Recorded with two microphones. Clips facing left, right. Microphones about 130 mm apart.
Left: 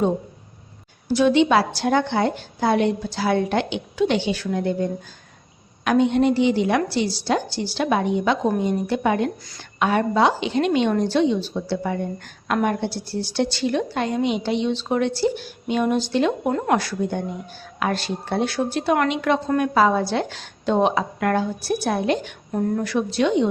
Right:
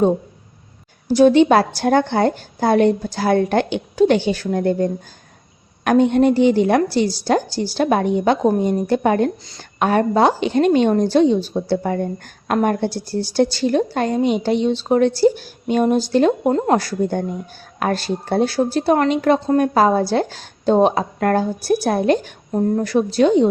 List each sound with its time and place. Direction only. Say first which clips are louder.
1.0 s a woman's voice: right 5 dB; 40° right (ahead or behind)